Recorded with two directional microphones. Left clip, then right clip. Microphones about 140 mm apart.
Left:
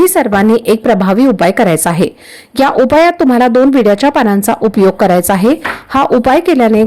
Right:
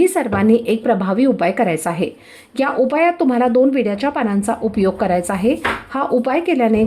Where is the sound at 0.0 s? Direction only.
40° left (ahead or behind).